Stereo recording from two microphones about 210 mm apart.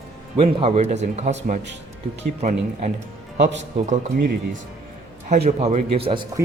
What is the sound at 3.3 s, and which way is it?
Speech, 60° right (ahead or behind).